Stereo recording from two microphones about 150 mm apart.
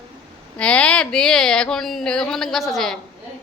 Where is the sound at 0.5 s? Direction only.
10° left (ahead or behind).